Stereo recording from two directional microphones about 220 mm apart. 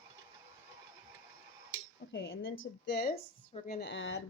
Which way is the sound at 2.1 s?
55° left (ahead or behind).